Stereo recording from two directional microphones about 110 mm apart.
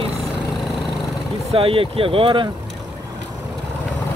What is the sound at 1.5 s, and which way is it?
Speech, 55° right (ahead or behind).